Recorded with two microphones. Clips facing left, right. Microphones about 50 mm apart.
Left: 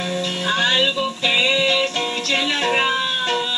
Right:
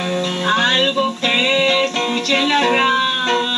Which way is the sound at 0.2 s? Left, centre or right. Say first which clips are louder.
Right 4 dB; centre.